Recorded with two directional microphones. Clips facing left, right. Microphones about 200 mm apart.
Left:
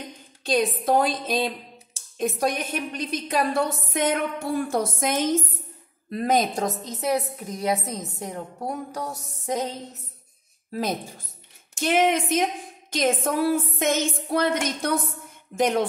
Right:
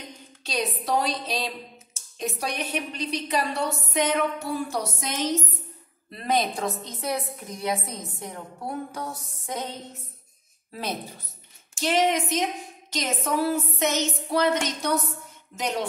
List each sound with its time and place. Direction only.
0.4 s a woman's voice: 50° left (ahead or behind)
10.7 s a woman's voice: 45° left (ahead or behind)